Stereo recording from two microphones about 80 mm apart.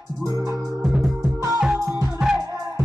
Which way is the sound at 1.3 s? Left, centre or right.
Right.